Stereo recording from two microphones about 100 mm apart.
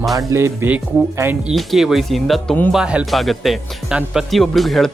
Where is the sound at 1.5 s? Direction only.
Centre (ahead or behind).